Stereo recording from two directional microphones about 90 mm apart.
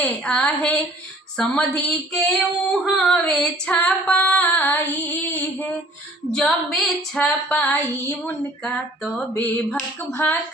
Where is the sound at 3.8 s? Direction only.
20° left (ahead or behind).